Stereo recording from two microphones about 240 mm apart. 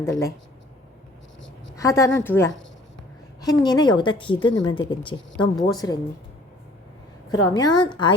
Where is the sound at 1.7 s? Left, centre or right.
Centre.